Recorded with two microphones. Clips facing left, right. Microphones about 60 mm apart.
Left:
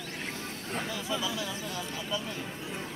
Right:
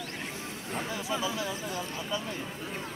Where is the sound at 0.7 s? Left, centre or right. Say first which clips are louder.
Right 1 dB; right.